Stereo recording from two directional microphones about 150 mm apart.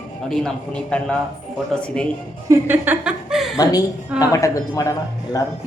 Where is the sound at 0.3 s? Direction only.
5° left (ahead or behind).